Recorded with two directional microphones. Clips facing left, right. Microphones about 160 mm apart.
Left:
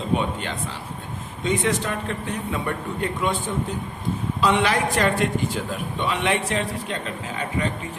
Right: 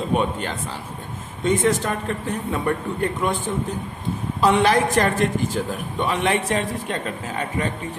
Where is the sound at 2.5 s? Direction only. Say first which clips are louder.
Right 6 dB; 45° right (ahead or behind).